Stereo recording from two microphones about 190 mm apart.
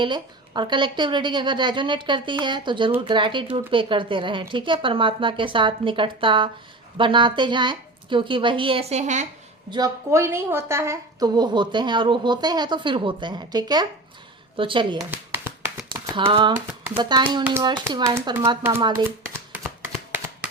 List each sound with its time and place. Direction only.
0.0 s a woman's voice: 25° right (ahead or behind)
9.6 s a woman's voice: 20° right (ahead or behind)
14.9 s a sound: 10° right (ahead or behind)
15.9 s a sound: 25° right (ahead or behind)
16.6 s speech: 10° right (ahead or behind)
17.0 s a woman's voice: 20° right (ahead or behind)
19.0 s shuffling cards: 10° right (ahead or behind)